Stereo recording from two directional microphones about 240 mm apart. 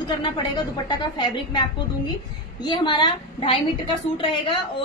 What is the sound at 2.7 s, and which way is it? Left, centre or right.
A woman's voice, centre.